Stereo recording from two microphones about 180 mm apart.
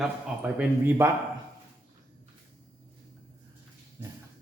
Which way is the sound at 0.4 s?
5° right (ahead or behind).